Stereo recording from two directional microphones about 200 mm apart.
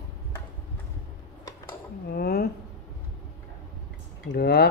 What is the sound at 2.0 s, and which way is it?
Dishes, 50° left (ahead or behind).